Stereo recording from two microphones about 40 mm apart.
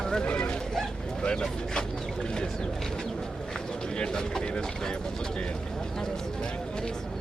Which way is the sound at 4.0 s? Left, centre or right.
Centre.